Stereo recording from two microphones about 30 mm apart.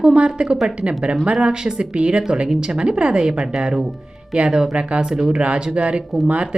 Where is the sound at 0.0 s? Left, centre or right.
Right.